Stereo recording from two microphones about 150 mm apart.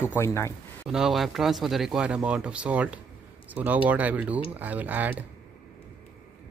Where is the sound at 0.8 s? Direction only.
5° right (ahead or behind).